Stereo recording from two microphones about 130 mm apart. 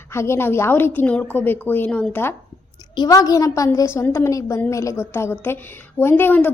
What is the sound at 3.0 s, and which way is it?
A woman's voice, 30° left (ahead or behind).